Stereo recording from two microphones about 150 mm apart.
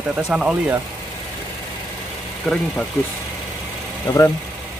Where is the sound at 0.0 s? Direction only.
5° right (ahead or behind).